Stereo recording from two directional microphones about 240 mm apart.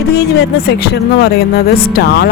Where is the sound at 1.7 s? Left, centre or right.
Left.